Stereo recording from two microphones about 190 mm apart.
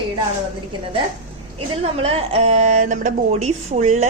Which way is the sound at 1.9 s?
30° right (ahead or behind).